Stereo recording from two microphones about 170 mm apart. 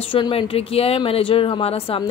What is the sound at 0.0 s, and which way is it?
A woman's voice, 30° left (ahead or behind).